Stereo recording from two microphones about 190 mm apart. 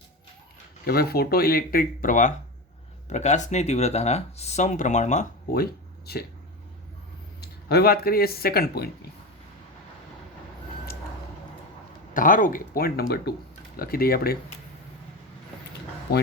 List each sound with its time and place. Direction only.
0.9 s speech: 55° left (ahead or behind); by 5.5 s 40° left (ahead or behind)
7.4 s speech: 55° left (ahead or behind)
12.1 s speech: 45° left (ahead or behind)